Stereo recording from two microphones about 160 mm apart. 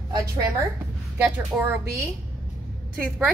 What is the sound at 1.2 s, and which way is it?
Speech, 10° right (ahead or behind).